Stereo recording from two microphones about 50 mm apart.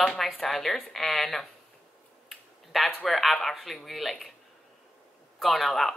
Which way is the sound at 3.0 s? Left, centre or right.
Centre.